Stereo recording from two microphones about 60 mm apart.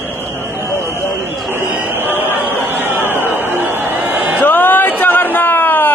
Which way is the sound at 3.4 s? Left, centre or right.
Right.